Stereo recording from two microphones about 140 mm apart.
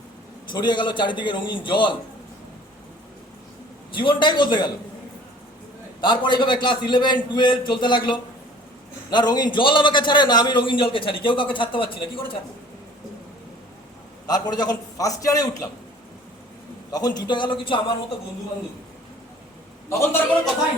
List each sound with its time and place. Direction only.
0.5 s a man's voice: 30° left (ahead or behind)
3.9 s a man's voice: 35° left (ahead or behind)
6.0 s a man's voice: 35° left (ahead or behind)
14.3 s a man's voice: 30° left (ahead or behind)
16.9 s a man's voice: 30° left (ahead or behind)
19.9 s a man's voice: 20° left (ahead or behind)